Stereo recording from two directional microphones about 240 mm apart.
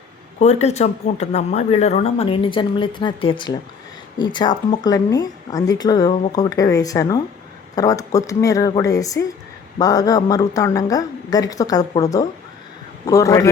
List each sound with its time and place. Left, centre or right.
0.3 s a woman's voice: left